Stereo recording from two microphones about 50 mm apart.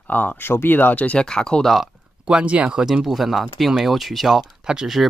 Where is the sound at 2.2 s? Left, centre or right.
Right.